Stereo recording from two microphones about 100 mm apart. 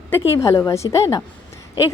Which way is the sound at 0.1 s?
25° left (ahead or behind).